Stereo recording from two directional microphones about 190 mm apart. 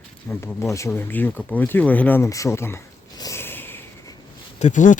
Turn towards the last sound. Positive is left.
turn(degrees=40)  # may be behind; listen again after turning